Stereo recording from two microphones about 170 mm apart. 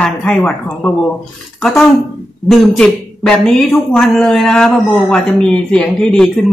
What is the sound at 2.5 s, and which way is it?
A woman's voice, 5° left (ahead or behind).